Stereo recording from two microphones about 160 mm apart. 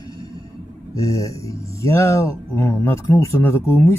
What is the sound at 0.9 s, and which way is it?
Speech, 20° left (ahead or behind).